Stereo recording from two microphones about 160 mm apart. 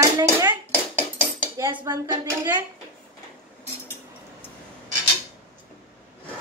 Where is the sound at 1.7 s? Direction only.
25° right (ahead or behind).